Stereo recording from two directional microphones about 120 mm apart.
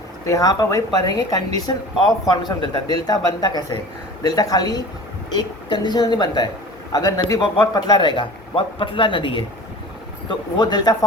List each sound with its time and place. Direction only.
0.3 s speech: 30° left (ahead or behind)